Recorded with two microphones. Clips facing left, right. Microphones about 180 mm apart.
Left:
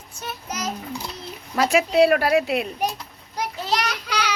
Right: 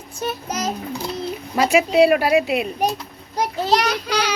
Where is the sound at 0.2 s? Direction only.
30° right (ahead or behind).